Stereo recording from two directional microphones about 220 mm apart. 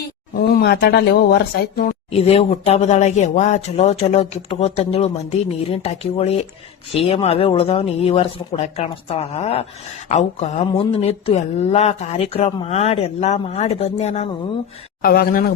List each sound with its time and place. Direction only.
0.3 s speech: 45° left (ahead or behind)
2.1 s speech: 25° left (ahead or behind)
15.0 s speech: 45° left (ahead or behind)